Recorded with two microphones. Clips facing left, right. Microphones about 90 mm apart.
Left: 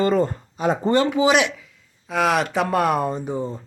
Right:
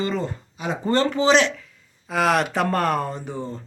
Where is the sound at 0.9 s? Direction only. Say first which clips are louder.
Right 1 dB; 10° left (ahead or behind).